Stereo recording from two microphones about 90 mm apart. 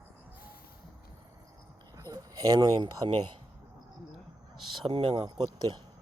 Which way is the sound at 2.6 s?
60° right (ahead or behind).